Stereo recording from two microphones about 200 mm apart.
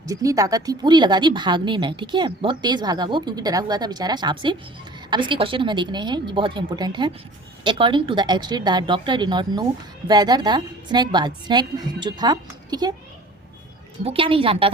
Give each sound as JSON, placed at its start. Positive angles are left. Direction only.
{"t": 0.1, "sound": "a woman's voice", "side_deg": -15}
{"t": 14.0, "sound": "a woman's voice", "side_deg": -25}